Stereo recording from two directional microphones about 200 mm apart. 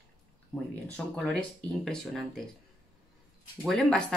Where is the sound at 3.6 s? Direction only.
Centre (ahead or behind).